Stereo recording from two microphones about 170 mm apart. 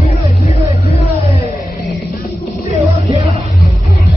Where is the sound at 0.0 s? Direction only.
40° left (ahead or behind).